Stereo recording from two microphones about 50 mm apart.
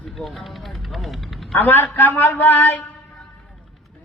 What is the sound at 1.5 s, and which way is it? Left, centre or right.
A man's voice, left.